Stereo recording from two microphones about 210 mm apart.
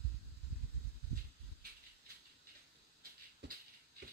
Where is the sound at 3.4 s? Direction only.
55° right (ahead or behind).